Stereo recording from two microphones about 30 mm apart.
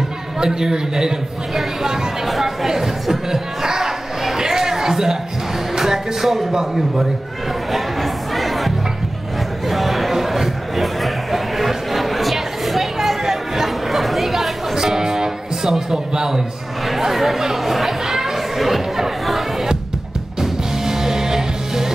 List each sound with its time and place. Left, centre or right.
0.4 s a man's voice: right
2.2 s speech: centre
2.7 s speech: centre
4.4 s chatter: centre
5.8 s music: centre
6.5 s a man's voice: centre
7.7 s music: centre
9.7 s a sound: centre
13.9 s chatter: centre
14.8 s music: centre
17.0 s chatter: centre
18.7 s chatter: centre
20.3 s music: centre